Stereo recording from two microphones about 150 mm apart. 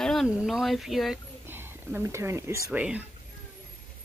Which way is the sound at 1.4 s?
15° right (ahead or behind).